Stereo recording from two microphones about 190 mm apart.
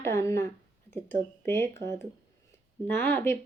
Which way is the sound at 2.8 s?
10° left (ahead or behind).